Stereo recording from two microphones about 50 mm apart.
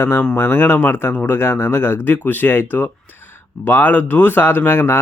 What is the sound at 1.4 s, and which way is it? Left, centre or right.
Speech, left.